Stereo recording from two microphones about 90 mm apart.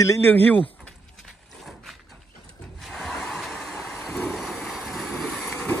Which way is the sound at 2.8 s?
Centre (ahead or behind).